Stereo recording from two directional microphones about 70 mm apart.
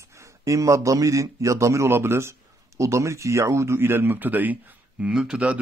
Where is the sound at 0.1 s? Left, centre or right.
Right.